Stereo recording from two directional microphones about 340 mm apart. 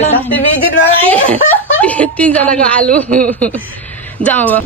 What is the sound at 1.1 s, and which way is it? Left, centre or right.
Speech, centre.